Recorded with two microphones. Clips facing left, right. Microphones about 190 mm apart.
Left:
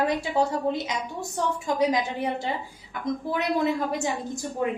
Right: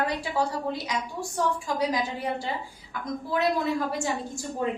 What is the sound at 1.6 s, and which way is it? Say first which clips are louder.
Speech: left 3 dB; 20° left (ahead or behind).